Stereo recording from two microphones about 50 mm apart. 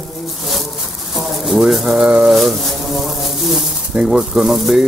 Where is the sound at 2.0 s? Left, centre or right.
Centre.